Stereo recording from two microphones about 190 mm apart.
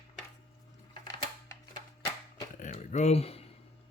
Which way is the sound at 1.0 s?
20° left (ahead or behind).